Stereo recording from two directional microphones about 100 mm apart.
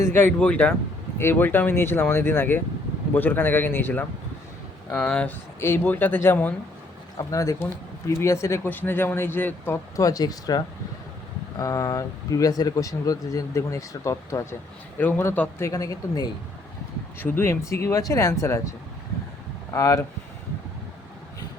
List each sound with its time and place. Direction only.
0.0 s a man's voice: 20° left (ahead or behind)
5.5 s speech: 25° left (ahead or behind)
7.2 s speech: 35° left (ahead or behind)
14.9 s a man's voice: 15° left (ahead or behind)
15.5 s speech: 35° left (ahead or behind)
17.2 s speech: 20° left (ahead or behind)
19.7 s speech: 30° left (ahead or behind)